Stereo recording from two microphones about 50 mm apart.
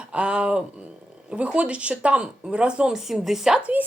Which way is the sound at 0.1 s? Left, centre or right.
Right.